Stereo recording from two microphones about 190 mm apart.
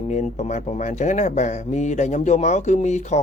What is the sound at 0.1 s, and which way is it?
Speech, 40° left (ahead or behind).